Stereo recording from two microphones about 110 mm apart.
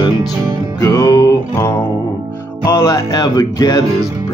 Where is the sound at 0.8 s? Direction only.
35° left (ahead or behind).